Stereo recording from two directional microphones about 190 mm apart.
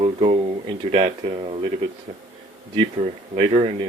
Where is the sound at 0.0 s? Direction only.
30° right (ahead or behind).